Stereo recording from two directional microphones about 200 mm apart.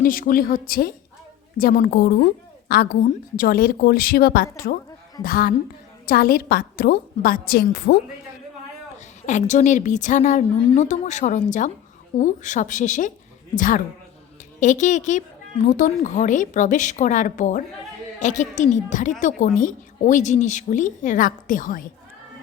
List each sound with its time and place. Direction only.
0.0 s a woman's voice: 45° left (ahead or behind)
9.2 s a woman's voice: 40° left (ahead or behind)